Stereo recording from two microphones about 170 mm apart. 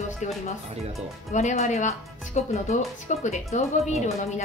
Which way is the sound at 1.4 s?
45° left (ahead or behind).